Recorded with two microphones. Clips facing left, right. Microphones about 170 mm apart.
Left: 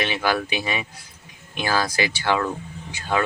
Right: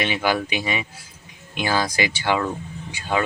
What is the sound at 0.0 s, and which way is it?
Speech, 15° right (ahead or behind).